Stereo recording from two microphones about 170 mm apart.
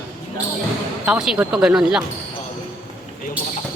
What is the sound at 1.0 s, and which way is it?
Speech, 5° right (ahead or behind).